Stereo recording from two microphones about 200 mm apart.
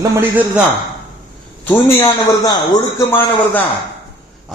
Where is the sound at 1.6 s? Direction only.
10° left (ahead or behind).